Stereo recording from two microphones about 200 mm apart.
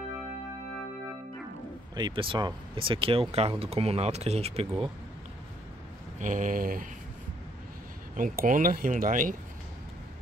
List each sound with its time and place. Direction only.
2.0 s speech: 25° right (ahead or behind)
6.1 s speech: 40° right (ahead or behind)
8.2 s speech: 40° right (ahead or behind)